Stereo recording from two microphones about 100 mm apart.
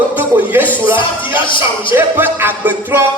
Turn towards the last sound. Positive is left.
turn(degrees=-20)  # may be behind; listen again after turning